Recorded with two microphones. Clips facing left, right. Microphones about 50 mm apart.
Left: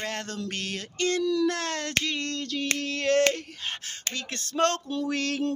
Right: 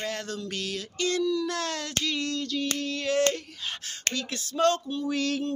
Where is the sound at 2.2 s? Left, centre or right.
Left.